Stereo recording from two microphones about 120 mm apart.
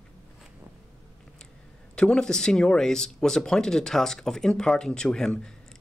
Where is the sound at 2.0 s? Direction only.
5° left (ahead or behind).